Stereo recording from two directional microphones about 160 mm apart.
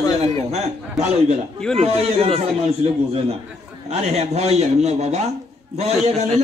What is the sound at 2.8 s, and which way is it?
A man's voice, 40° right (ahead or behind).